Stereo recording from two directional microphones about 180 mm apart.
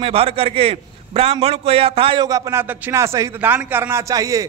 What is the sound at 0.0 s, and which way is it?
A man's voice, 30° right (ahead or behind).